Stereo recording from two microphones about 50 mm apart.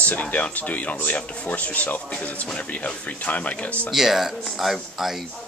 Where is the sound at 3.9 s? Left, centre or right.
Centre.